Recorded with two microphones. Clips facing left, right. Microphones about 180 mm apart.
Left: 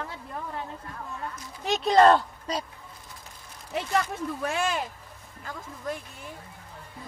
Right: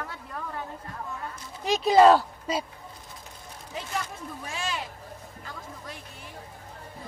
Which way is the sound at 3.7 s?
70° left (ahead or behind).